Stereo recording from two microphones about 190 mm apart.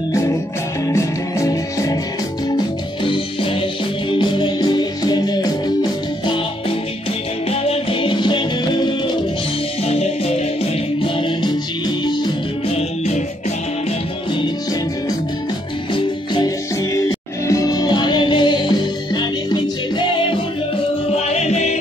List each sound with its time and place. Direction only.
0.8 s music: 15° left (ahead or behind)
4.1 s music: 25° left (ahead or behind)
7.6 s music: 30° left (ahead or behind)
12.7 s music: 35° left (ahead or behind)
17.5 s music: 20° left (ahead or behind); by 21.7 s 35° left (ahead or behind)